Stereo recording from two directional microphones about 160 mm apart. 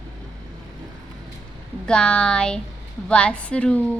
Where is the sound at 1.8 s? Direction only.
5° left (ahead or behind).